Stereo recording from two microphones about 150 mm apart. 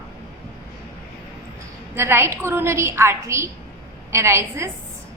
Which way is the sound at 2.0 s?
15° right (ahead or behind).